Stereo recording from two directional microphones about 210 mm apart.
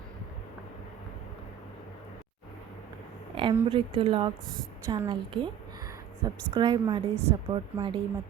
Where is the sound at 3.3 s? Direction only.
25° right (ahead or behind).